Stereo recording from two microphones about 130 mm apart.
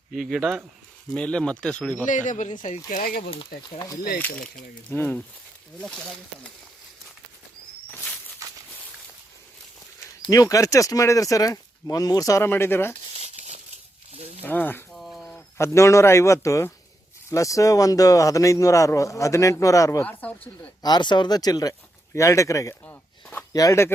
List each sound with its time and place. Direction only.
0.1 s speech: centre (ahead or behind)
2.0 s speech: 70° left (ahead or behind)
4.2 s speech: 5° left (ahead or behind)
10.2 s speech: 25° left (ahead or behind)
13.1 s crumpling: 55° right (ahead or behind)
14.2 s snake: 50° right (ahead or behind)
14.4 s speech: 15° left (ahead or behind)
14.9 s a sound: centre (ahead or behind)
15.5 s speech: 20° left (ahead or behind)
20.1 s speech: 10° left (ahead or behind)
20.8 s speech: 35° left (ahead or behind)
22.7 s speech: 15° left (ahead or behind)
23.5 s speech: 25° left (ahead or behind)